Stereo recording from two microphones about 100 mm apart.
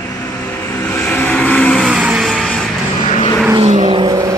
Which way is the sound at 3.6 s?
55° right (ahead or behind).